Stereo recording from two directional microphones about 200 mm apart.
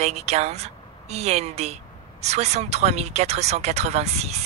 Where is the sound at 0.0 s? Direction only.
35° right (ahead or behind).